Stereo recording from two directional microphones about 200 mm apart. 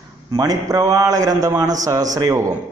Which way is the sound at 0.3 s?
20° right (ahead or behind).